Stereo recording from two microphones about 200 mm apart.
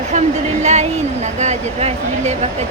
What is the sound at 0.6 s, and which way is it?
Speech, 35° right (ahead or behind).